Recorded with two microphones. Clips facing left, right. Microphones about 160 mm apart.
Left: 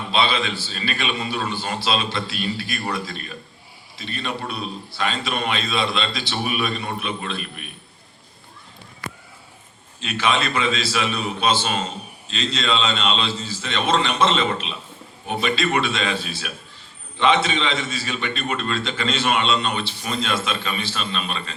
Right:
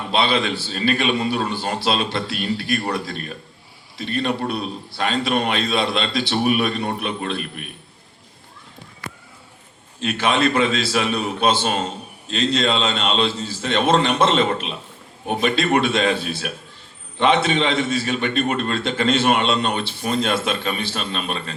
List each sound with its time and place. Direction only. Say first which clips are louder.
0.1 s a man's voice: right 2 dB; 55° right (ahead or behind)
10.0 s a man's voice: right 3 dB; 55° right (ahead or behind)